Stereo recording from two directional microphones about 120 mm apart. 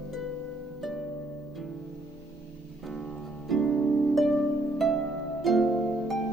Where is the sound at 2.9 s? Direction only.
Centre (ahead or behind).